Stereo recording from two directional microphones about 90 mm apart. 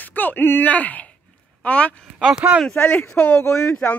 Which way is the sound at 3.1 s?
20° left (ahead or behind).